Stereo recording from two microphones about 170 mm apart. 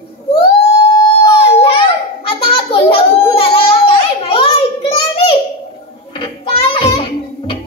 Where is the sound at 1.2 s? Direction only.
35° left (ahead or behind).